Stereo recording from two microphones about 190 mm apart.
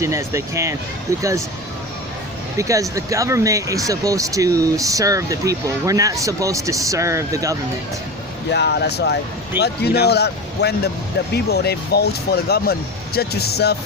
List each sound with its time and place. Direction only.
0.0 s speech: 15° right (ahead or behind)
2.6 s speech: 15° right (ahead or behind)
8.4 s speech: 60° left (ahead or behind)